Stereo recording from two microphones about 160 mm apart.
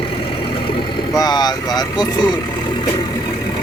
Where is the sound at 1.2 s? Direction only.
25° left (ahead or behind).